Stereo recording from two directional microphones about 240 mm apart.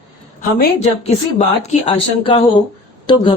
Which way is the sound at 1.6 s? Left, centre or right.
Left.